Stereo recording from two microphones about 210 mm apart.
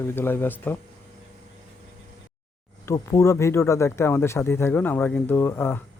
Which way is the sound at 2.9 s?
15° left (ahead or behind).